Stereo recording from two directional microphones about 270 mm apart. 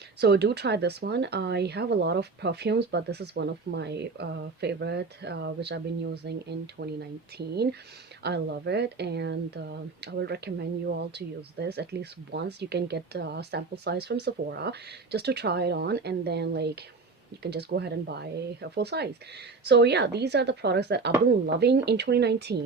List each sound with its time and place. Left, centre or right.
0.2 s speech: right